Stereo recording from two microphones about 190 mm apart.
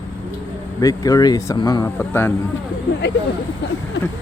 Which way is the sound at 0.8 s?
20° left (ahead or behind).